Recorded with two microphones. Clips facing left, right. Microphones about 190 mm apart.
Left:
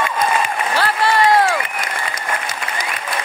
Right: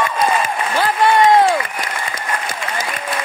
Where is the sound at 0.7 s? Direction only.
20° right (ahead or behind).